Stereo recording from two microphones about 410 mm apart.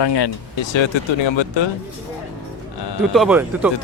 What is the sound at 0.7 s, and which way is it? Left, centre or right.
Speech, left.